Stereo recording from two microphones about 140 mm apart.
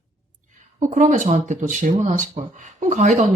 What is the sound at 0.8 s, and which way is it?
Speech, 60° right (ahead or behind).